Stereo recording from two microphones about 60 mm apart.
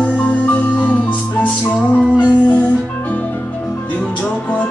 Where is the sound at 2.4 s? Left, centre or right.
Left.